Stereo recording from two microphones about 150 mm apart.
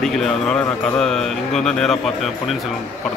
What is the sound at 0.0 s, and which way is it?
Speech, 5° left (ahead or behind).